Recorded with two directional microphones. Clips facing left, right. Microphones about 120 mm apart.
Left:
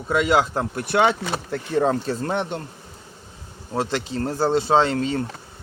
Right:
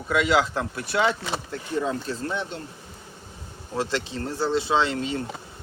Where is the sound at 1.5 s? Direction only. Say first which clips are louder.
Left 7 dB; 90° left.